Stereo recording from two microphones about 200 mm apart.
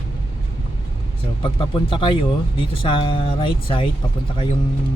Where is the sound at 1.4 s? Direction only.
25° left (ahead or behind).